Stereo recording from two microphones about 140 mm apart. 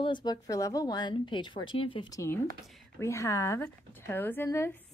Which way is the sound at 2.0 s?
20° left (ahead or behind).